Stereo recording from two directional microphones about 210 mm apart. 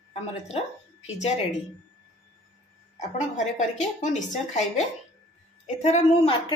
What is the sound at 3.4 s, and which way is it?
A woman's voice, 35° left (ahead or behind).